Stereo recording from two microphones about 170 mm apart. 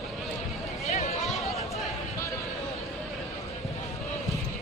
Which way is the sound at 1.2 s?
Centre (ahead or behind).